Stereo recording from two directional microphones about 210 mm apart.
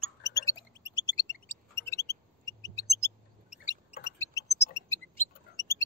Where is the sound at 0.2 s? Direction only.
15° left (ahead or behind).